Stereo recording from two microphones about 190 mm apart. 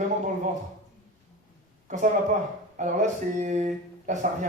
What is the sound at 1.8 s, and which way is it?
A man's voice, 40° right (ahead or behind).